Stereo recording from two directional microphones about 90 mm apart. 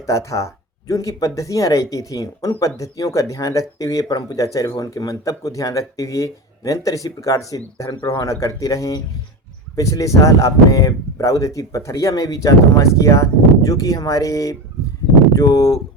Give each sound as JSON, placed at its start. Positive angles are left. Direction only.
{"t": 0.0, "sound": "speech", "side_deg": 35}